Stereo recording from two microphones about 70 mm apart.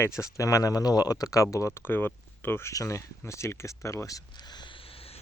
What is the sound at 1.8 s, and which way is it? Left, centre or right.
Speech, left.